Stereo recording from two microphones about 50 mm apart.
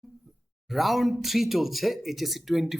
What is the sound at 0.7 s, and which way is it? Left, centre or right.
Speech, centre.